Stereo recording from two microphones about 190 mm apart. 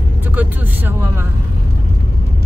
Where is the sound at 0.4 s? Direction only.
10° right (ahead or behind).